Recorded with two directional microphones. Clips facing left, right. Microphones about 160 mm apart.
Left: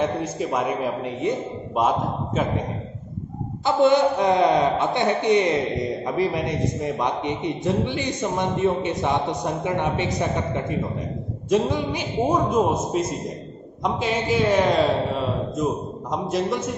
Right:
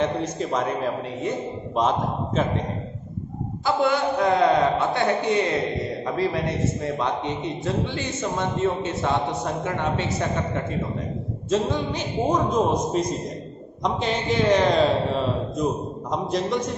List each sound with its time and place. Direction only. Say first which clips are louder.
0.0 s a man's voice: even; 10° left (ahead or behind)
1.8 s a man's voice: left 1 dB; 10° left (ahead or behind)
3.6 s a woman's voice: left 4 dB; 20° left (ahead or behind); by 16.7 s 5° left (ahead or behind)